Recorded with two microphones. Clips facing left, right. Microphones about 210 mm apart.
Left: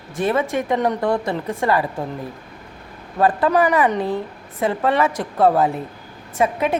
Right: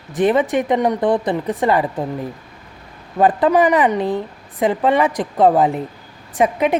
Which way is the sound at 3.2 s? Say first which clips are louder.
Right 3 dB; 20° right (ahead or behind).